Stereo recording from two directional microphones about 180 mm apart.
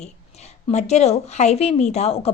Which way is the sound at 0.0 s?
40° left (ahead or behind).